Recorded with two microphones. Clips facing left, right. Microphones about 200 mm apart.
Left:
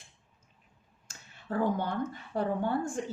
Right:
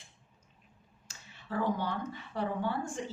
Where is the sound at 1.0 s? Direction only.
50° left (ahead or behind).